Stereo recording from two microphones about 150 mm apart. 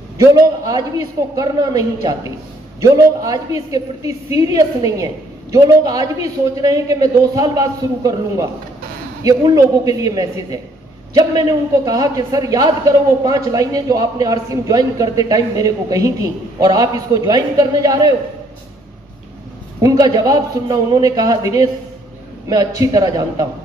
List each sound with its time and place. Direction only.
0.2 s a man's voice: 25° right (ahead or behind)
19.8 s a man's voice: 25° right (ahead or behind)